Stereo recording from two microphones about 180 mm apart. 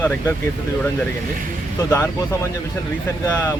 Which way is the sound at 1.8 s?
15° left (ahead or behind).